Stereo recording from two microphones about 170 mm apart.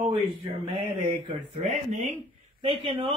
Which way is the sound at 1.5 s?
40° right (ahead or behind).